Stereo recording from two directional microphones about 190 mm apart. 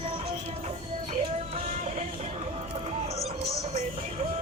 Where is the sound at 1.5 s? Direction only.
35° right (ahead or behind).